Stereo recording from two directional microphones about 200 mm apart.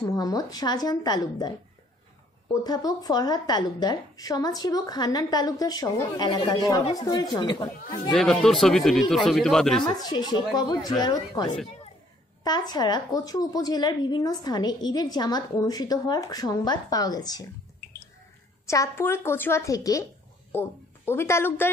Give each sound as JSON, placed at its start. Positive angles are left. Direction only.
{"t": 0.0, "sound": "a woman's voice", "side_deg": 15}
{"t": 2.6, "sound": "a woman's voice", "side_deg": 20}
{"t": 8.1, "sound": "speech", "side_deg": 0}
{"t": 9.8, "sound": "a woman's voice", "side_deg": 20}
{"t": 18.7, "sound": "a woman's voice", "side_deg": 15}